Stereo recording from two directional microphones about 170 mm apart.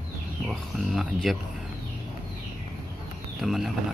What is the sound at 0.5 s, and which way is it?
Speech, centre (ahead or behind).